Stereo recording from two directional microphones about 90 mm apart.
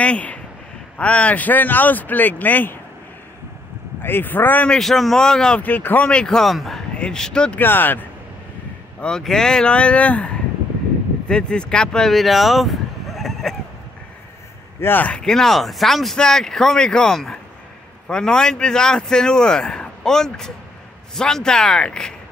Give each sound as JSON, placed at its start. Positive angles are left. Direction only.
{"t": 0.0, "sound": "speech", "side_deg": 15}
{"t": 4.0, "sound": "speech", "side_deg": 20}
{"t": 4.6, "sound": "speech", "side_deg": 5}
{"t": 5.6, "sound": "speech", "side_deg": 20}
{"t": 7.6, "sound": "speech", "side_deg": 20}
{"t": 9.0, "sound": "speech", "side_deg": 5}
{"t": 14.8, "sound": "speech", "side_deg": 20}